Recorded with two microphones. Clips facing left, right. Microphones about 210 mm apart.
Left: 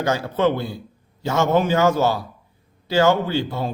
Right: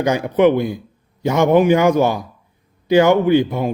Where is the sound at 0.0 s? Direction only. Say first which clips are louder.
Right 6 dB; 15° right (ahead or behind).